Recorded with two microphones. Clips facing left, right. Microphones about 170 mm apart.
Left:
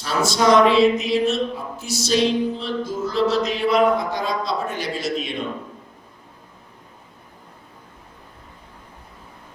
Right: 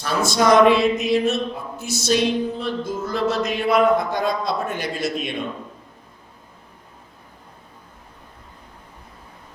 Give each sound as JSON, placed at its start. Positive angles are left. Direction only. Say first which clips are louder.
{"t": 0.0, "sound": "music", "louder": "even", "side_deg": -55}